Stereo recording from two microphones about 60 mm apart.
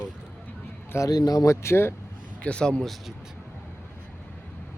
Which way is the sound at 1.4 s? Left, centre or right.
Left.